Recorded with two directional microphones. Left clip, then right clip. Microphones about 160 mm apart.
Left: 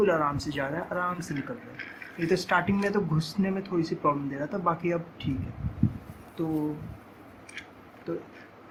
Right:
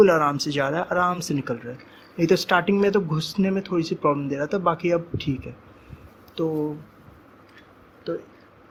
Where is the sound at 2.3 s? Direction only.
60° right (ahead or behind).